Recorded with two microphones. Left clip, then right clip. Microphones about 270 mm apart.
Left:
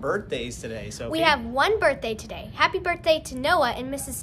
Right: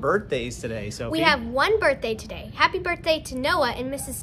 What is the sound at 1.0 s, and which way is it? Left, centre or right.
A woman's voice, centre.